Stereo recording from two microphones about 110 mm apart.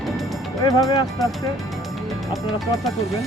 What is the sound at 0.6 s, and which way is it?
Speech, 30° left (ahead or behind).